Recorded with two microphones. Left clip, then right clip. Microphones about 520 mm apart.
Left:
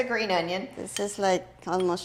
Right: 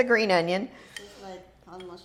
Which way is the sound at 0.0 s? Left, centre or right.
Right.